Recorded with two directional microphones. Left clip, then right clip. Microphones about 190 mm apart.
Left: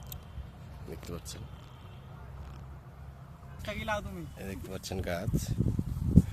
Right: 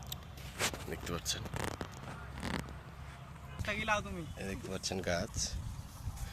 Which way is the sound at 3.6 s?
60° left (ahead or behind).